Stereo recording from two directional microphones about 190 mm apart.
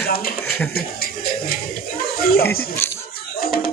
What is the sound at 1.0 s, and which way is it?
Music, 50° left (ahead or behind).